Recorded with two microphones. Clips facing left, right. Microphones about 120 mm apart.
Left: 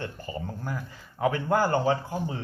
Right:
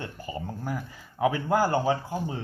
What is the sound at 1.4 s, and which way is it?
Speech, 10° right (ahead or behind).